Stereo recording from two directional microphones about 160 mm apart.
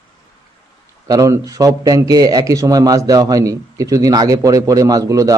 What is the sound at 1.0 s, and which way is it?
Speech, 20° right (ahead or behind).